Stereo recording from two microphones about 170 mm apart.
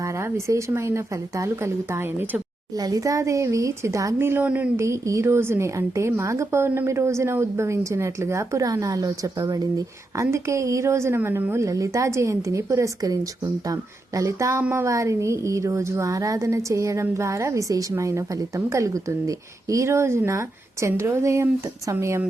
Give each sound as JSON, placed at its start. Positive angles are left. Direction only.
{"t": 0.0, "sound": "speech", "side_deg": -15}
{"t": 14.2, "sound": "speech", "side_deg": -20}